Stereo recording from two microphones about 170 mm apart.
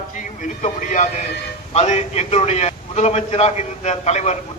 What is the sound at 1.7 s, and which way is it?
A man's voice, 40° left (ahead or behind).